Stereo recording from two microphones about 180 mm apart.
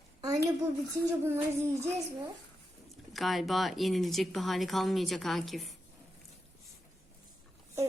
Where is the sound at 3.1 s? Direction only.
Centre (ahead or behind).